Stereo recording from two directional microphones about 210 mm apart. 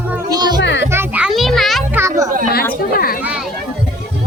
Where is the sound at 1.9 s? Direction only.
15° right (ahead or behind).